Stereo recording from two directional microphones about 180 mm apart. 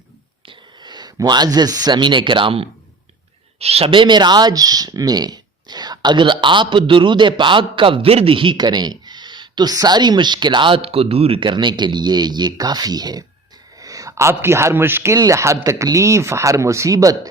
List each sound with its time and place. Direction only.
0.4 s a man's voice: 25° right (ahead or behind)